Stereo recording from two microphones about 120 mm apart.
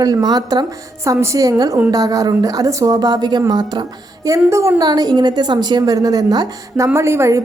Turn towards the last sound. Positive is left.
turn(degrees=-25)  # may be behind; listen again after turning